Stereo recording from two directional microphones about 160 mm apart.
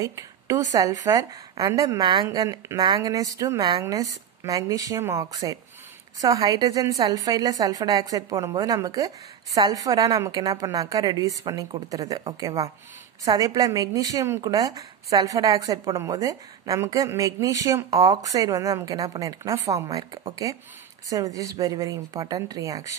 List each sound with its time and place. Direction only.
0.0 s a woman's voice: 20° right (ahead or behind)